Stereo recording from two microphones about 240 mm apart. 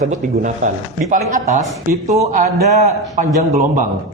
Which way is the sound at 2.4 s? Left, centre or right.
Right.